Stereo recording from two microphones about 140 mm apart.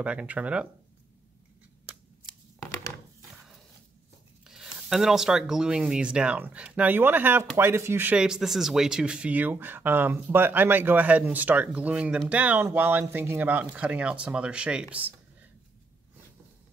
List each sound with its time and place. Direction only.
0.0 s speech: 10° right (ahead or behind)
4.5 s speech: 5° right (ahead or behind)